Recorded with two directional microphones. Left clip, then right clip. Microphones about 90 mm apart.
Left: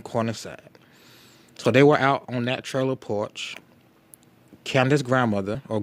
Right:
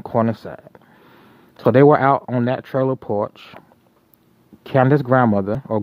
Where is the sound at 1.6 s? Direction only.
30° right (ahead or behind).